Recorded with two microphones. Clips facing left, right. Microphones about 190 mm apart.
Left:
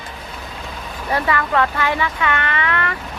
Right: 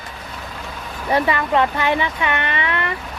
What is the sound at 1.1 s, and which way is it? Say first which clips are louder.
Speech: right 2 dB; 20° right (ahead or behind).